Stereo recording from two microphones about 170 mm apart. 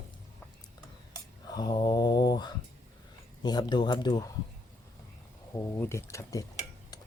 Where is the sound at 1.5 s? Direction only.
25° left (ahead or behind).